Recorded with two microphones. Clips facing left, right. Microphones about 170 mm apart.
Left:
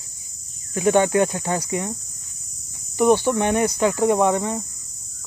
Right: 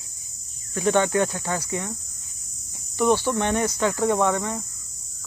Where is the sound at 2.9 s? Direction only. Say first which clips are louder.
Left 4 dB; 15° left (ahead or behind).